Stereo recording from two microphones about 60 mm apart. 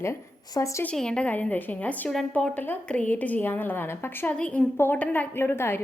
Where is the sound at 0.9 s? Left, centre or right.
Centre.